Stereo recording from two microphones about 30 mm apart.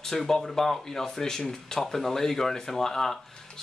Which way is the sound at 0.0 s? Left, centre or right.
Centre.